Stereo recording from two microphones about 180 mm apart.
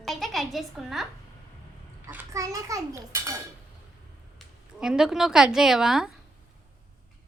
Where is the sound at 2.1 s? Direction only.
15° right (ahead or behind).